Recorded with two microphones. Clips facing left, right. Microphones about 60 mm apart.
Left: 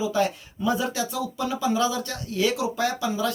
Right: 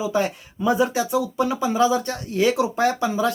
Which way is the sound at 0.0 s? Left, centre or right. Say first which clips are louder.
Right 1 dB; right.